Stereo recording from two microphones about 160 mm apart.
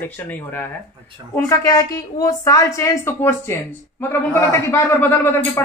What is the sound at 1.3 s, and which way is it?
A woman's voice, 20° left (ahead or behind).